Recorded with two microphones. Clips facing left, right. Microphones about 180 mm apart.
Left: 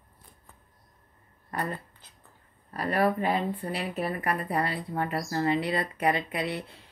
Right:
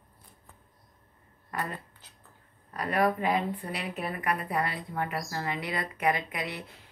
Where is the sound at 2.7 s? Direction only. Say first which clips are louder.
Left 1 dB; 30° left (ahead or behind).